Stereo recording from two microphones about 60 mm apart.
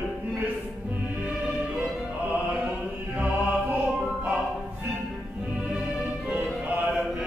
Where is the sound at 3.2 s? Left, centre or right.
Right.